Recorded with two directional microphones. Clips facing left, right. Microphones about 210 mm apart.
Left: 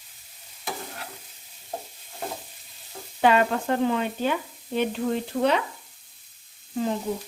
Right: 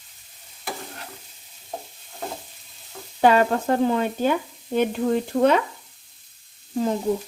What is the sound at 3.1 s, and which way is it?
Speech, 40° right (ahead or behind).